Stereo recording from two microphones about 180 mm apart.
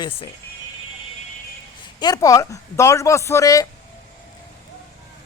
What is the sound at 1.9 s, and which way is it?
Speech, 20° left (ahead or behind).